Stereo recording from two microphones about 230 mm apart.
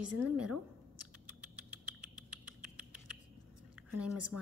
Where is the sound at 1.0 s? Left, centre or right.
Right.